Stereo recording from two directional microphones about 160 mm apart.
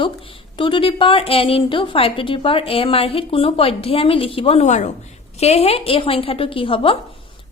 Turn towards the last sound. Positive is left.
turn(degrees=35)  # may be behind; listen again after turning